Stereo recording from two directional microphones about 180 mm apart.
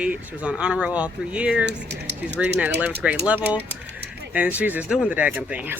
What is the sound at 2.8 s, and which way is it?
Speech, 10° right (ahead or behind).